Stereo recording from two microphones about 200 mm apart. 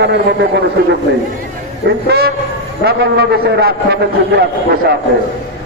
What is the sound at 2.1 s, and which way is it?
A man's voice, 50° right (ahead or behind).